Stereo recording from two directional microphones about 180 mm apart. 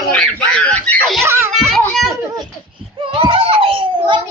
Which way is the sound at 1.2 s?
15° right (ahead or behind).